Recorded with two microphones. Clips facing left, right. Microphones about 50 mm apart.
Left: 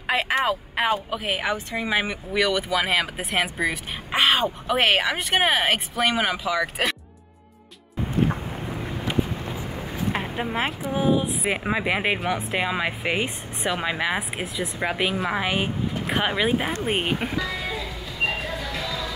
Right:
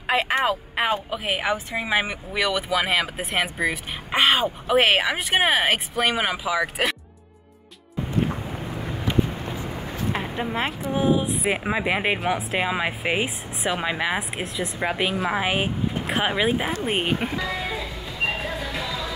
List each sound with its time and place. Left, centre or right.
0.0 s speech: centre
8.8 s vehicle: centre
9.6 s vehicle: centre
10.1 s speech: centre
17.4 s music: centre
18.4 s a sound: centre